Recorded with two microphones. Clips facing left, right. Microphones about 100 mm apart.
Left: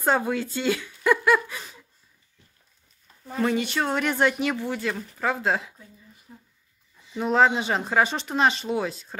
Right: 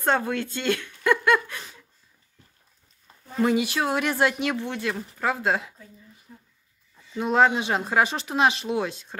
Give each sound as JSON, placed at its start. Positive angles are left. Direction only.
{"t": 0.0, "sound": "speech", "side_deg": 5}
{"t": 3.3, "sound": "speech", "side_deg": -5}
{"t": 6.3, "sound": "speech", "side_deg": 20}
{"t": 7.2, "sound": "speech", "side_deg": 0}